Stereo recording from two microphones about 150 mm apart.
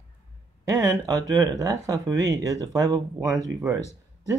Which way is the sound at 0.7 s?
25° right (ahead or behind).